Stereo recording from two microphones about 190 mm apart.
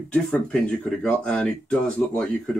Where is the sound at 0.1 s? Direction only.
5° left (ahead or behind).